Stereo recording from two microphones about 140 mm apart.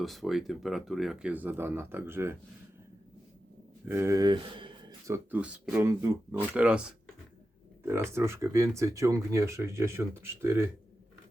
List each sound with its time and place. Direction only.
0.0 s speech: centre (ahead or behind); by 2.4 s 15° right (ahead or behind)
3.8 s speech: 20° right (ahead or behind)
5.0 s speech: 20° right (ahead or behind)
5.4 s speech: 10° right (ahead or behind)
8.1 s speech: 20° right (ahead or behind)